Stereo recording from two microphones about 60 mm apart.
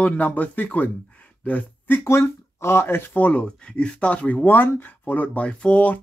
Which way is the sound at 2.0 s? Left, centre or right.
Left.